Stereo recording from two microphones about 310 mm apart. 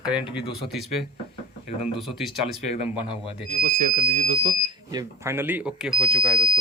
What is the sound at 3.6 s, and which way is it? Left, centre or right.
Speech, right.